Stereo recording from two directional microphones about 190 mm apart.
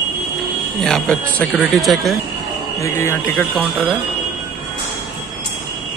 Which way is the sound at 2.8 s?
15° left (ahead or behind).